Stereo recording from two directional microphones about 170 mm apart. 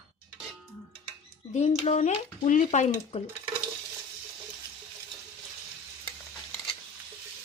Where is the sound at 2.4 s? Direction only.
45° left (ahead or behind).